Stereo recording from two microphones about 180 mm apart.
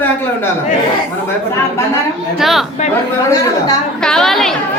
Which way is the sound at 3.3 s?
20° left (ahead or behind).